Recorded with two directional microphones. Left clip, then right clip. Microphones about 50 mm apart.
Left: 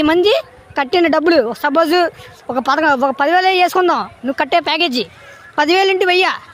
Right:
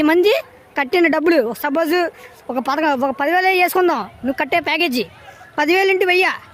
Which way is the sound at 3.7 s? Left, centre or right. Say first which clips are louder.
Left 3 dB; right.